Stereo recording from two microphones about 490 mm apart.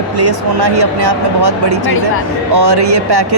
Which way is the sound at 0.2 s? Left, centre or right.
Right.